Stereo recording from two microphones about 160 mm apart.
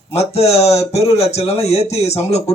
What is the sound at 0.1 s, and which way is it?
A man's voice, 40° left (ahead or behind).